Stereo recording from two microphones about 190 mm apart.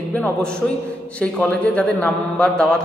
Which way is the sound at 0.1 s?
5° left (ahead or behind).